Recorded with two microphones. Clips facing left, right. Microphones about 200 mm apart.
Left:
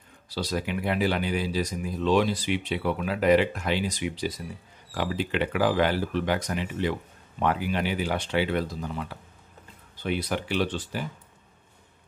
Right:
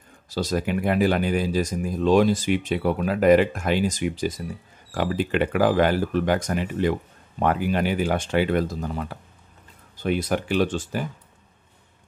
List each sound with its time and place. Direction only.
0.3 s speech: 45° right (ahead or behind)